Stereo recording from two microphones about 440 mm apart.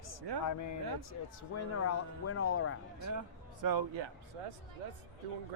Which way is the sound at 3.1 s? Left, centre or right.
Right.